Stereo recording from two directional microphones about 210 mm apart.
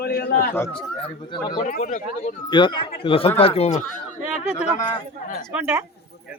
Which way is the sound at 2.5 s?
25° left (ahead or behind).